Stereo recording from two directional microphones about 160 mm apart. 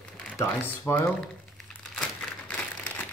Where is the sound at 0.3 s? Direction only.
15° left (ahead or behind).